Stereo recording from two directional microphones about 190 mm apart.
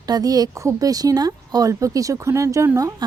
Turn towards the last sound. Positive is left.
turn(degrees=-15)  # may be behind; listen again after turning